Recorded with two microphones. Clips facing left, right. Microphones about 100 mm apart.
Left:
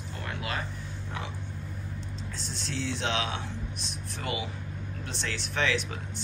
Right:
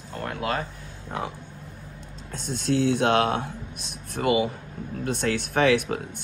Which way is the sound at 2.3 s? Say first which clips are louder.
Right 13 dB; 55° right (ahead or behind).